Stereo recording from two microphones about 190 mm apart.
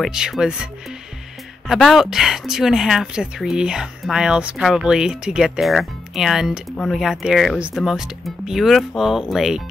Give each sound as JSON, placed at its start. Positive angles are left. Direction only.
{"t": 0.0, "sound": "speech", "side_deg": 0}
{"t": 1.7, "sound": "speech", "side_deg": 0}